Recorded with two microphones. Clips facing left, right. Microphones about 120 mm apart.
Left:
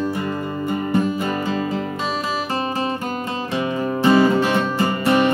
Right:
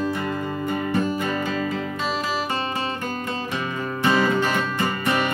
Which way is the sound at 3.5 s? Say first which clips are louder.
Left 6 dB; 35° left (ahead or behind).